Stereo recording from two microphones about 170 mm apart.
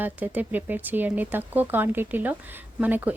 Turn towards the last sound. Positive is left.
turn(degrees=-10)  # may be behind; listen again after turning